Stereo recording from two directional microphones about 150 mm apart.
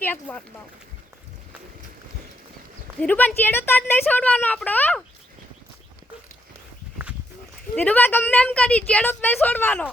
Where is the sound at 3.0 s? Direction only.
10° left (ahead or behind).